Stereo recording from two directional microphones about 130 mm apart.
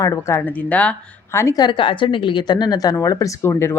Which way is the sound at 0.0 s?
25° left (ahead or behind).